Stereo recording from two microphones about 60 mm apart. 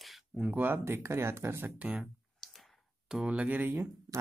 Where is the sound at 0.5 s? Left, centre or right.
Right.